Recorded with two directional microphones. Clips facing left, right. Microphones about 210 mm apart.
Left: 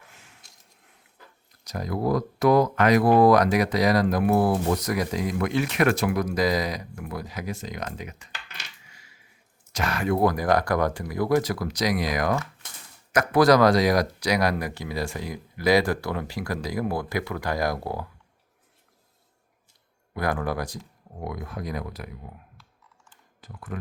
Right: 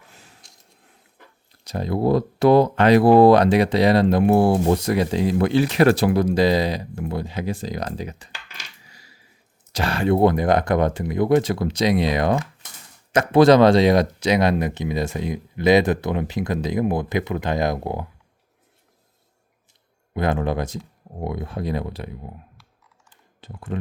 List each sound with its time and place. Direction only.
0.1 s a sound: 35° right (ahead or behind)
1.6 s speech: 30° right (ahead or behind)
8.8 s a sound: 35° right (ahead or behind)
9.7 s speech: 30° right (ahead or behind)
20.1 s speech: 25° right (ahead or behind)
23.4 s speech: 25° right (ahead or behind)